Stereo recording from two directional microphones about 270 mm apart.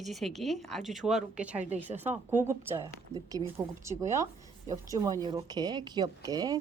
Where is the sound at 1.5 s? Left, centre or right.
Right.